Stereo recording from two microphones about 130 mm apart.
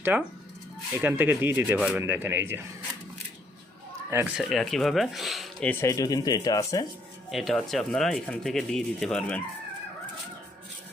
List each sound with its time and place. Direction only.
0.0 s speech: 15° right (ahead or behind)
4.4 s speech: centre (ahead or behind)
5.8 s speech: 25° left (ahead or behind)
7.3 s speech: centre (ahead or behind)